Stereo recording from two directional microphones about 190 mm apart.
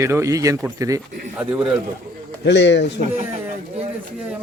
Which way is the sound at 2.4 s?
65° left (ahead or behind).